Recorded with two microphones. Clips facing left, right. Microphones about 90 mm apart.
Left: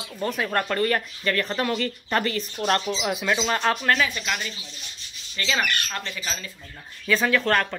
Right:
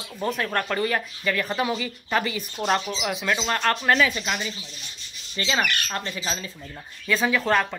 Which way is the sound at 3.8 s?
15° right (ahead or behind).